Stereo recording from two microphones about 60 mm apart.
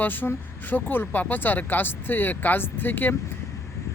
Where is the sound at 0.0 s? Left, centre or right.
Left.